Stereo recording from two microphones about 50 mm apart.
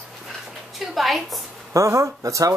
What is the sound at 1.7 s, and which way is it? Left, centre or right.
Speech, right.